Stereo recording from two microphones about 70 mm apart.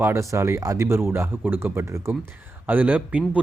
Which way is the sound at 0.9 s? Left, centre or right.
Right.